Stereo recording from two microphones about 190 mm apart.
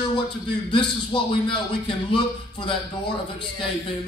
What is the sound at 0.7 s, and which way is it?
Speech, 25° left (ahead or behind).